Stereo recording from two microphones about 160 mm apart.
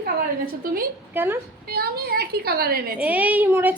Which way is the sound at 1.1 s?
15° right (ahead or behind).